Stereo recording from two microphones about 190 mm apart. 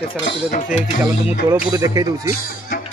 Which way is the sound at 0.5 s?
40° left (ahead or behind).